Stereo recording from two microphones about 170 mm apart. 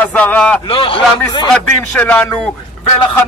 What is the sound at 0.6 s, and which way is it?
Speech, 30° left (ahead or behind).